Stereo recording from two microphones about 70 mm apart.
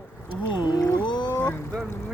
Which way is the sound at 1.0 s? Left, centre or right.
Left.